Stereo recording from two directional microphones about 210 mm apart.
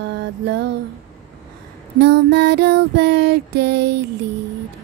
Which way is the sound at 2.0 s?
55° right (ahead or behind).